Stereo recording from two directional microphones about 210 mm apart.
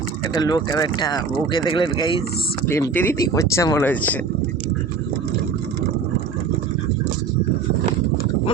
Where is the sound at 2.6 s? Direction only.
10° left (ahead or behind).